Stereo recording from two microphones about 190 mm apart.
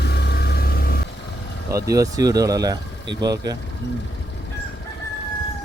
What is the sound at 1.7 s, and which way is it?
Speech, 15° right (ahead or behind).